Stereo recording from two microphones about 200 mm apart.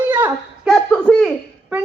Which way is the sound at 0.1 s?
10° right (ahead or behind).